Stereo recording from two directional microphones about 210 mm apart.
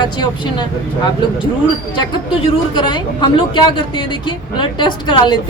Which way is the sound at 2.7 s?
20° left (ahead or behind).